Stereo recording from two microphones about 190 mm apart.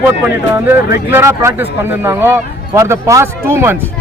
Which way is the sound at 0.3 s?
10° right (ahead or behind).